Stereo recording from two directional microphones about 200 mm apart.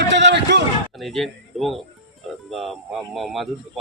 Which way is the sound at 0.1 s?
60° right (ahead or behind).